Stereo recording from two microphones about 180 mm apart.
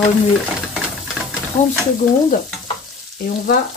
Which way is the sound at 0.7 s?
5° right (ahead or behind).